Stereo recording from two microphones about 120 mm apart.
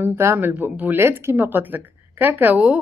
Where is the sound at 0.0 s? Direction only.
15° right (ahead or behind).